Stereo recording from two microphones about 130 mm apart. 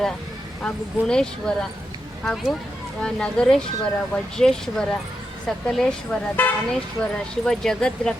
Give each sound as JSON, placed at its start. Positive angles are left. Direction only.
{"t": 0.6, "sound": "speech", "side_deg": 5}